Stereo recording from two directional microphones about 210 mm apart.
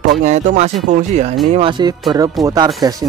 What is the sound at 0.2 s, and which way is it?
Speech, 35° right (ahead or behind).